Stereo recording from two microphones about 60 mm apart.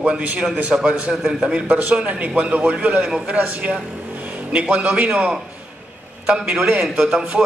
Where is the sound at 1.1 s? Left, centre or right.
Centre.